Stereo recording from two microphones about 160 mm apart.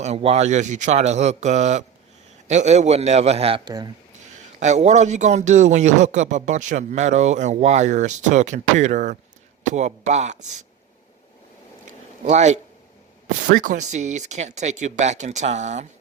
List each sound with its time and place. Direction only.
0.0 s a man's voice: 40° right (ahead or behind)
3.6 s speech: 25° right (ahead or behind)
4.2 s a man's voice: 45° right (ahead or behind)
12.2 s a man's voice: 45° right (ahead or behind)